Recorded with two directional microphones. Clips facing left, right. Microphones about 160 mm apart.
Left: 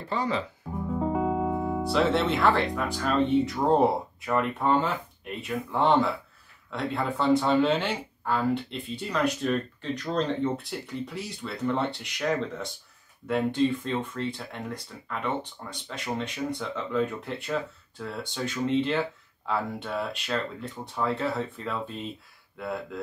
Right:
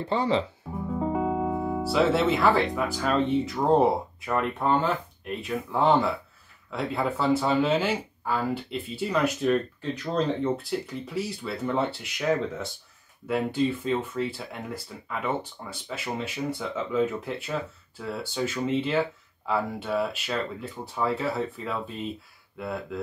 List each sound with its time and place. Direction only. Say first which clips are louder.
0.0 s speech: right 4 dB; 30° right (ahead or behind)
0.7 s speech: even; centre (ahead or behind)